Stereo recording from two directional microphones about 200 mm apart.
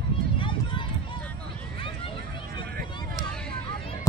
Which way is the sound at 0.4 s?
25° left (ahead or behind).